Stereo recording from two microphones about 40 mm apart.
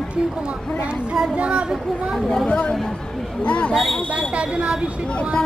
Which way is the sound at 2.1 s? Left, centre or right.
Centre.